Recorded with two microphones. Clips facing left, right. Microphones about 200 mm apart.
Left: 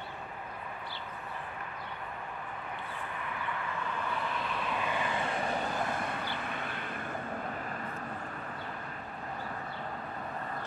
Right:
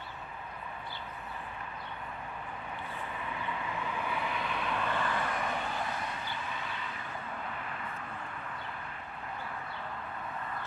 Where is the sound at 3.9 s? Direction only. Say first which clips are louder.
Even; 10° right (ahead or behind); by 7.9 s 40° left (ahead or behind).